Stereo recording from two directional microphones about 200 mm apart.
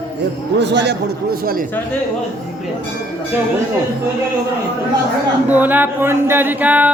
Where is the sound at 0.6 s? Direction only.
60° right (ahead or behind).